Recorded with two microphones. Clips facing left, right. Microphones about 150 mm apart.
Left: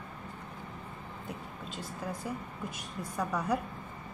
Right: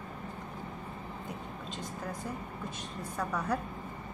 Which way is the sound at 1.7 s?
10° left (ahead or behind).